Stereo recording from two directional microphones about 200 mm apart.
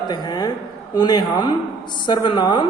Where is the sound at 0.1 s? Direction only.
20° left (ahead or behind).